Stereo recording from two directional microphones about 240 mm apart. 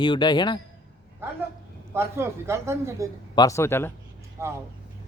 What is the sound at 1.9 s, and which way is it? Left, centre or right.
A man's voice, centre.